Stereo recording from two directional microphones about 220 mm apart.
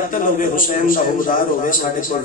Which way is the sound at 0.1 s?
35° left (ahead or behind).